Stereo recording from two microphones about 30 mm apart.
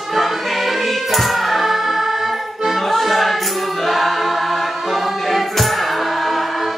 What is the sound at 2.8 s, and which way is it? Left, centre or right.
Choir, centre.